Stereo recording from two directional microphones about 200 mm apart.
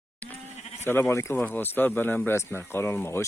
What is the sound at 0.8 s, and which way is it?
Speech, 10° left (ahead or behind).